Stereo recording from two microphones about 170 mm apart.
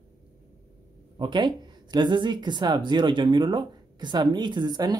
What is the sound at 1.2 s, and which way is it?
Speech, 25° right (ahead or behind).